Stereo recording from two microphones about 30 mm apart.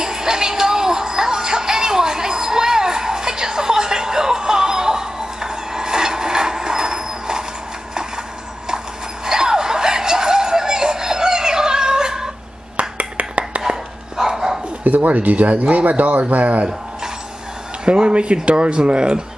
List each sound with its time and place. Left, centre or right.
0.0 s music: right
8.6 s a sound: right
12.7 s a sound: right
13.7 s dog: centre
14.8 s speech: right
17.8 s speech: right